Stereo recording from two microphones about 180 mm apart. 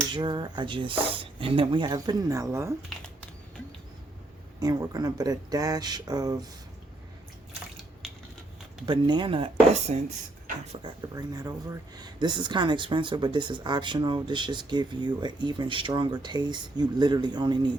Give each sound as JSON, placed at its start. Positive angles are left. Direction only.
{"t": 0.1, "sound": "speech", "side_deg": -25}
{"t": 4.6, "sound": "speech", "side_deg": -20}
{"t": 8.9, "sound": "speech", "side_deg": -25}
{"t": 9.9, "sound": "speech", "side_deg": -40}
{"t": 10.8, "sound": "speech", "side_deg": -25}